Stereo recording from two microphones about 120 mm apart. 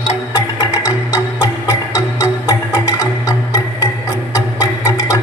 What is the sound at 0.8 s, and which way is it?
Music, 25° left (ahead or behind).